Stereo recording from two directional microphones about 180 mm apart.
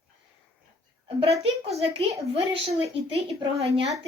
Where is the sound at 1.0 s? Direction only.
35° right (ahead or behind).